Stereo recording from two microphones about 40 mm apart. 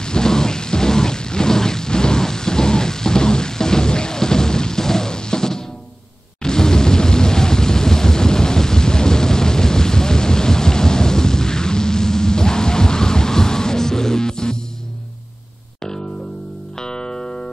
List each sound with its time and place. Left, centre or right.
0.0 s rain: centre
6.4 s thunder: centre
16.7 s music: centre